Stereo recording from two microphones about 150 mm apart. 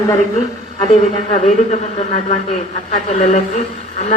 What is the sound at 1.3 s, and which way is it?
Speech, 50° left (ahead or behind).